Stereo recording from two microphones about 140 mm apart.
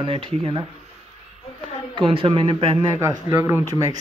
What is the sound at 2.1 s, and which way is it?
Speech, 40° right (ahead or behind).